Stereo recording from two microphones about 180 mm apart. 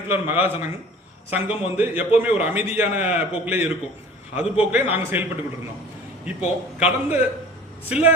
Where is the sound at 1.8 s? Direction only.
10° right (ahead or behind).